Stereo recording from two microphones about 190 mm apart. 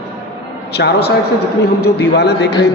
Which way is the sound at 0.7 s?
60° left (ahead or behind).